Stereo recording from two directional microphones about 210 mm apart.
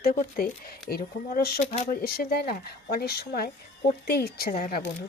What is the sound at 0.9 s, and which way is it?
Speech, 50° left (ahead or behind).